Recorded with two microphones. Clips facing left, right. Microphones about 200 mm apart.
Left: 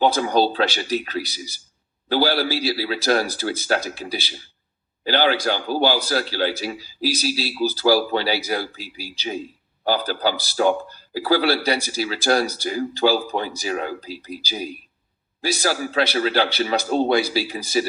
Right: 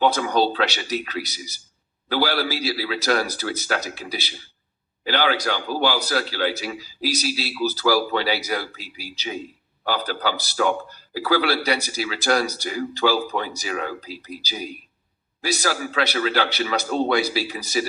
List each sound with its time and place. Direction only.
0.0 s a man's voice: 30° left (ahead or behind)